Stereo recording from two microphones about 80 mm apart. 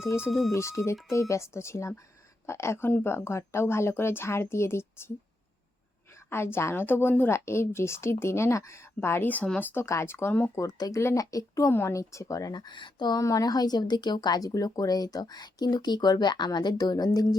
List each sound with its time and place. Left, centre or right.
0.3 s speech: centre
0.5 s a woman's voice: left
6.1 s a woman's voice: left
9.8 s a woman's voice: left
10.8 s speech: left
11.7 s speech: left
13.1 s speech: left